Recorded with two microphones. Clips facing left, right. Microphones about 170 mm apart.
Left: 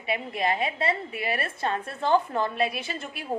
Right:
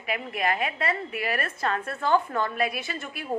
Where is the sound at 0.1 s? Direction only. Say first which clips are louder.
Left 1 dB; 25° left (ahead or behind).